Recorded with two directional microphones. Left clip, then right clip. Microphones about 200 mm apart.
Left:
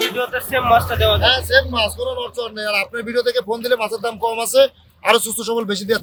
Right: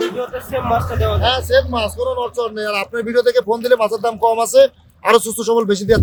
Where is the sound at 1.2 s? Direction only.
50° right (ahead or behind).